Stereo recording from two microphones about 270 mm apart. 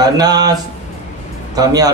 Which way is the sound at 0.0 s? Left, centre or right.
Centre.